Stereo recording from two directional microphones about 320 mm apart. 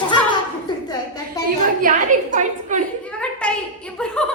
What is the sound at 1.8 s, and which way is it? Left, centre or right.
A woman's voice, right.